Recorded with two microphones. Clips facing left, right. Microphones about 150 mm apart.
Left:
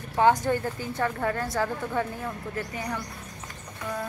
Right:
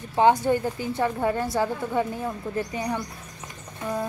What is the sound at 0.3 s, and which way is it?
A woman's voice, 10° right (ahead or behind).